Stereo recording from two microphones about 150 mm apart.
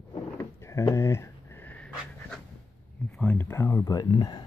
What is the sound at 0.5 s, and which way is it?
Pant, 20° left (ahead or behind).